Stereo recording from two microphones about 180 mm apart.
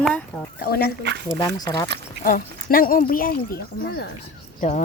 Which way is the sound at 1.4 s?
25° left (ahead or behind).